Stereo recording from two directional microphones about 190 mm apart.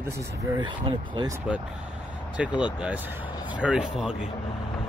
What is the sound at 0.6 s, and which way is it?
Speech, 25° right (ahead or behind).